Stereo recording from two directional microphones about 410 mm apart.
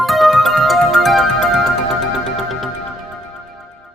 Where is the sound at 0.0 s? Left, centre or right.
Centre.